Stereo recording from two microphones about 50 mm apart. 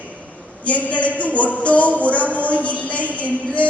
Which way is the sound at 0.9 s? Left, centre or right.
Left.